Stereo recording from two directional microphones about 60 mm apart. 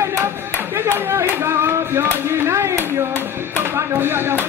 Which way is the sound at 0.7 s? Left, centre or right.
Right.